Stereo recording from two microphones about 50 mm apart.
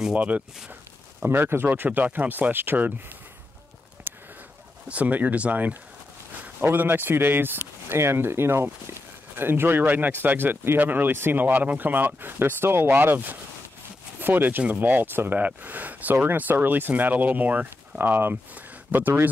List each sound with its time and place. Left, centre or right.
0.1 s speech: right
1.2 s a man's voice: right
1.9 s speech: right
4.1 s a sound: right
4.8 s a man's voice: right
9.4 s speech: right
17.6 s speech: right